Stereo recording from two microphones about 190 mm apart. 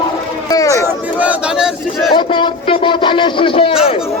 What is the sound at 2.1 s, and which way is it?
A man's voice, 25° left (ahead or behind).